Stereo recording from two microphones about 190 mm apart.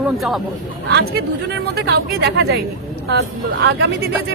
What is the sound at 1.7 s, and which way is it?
Speech, 60° right (ahead or behind).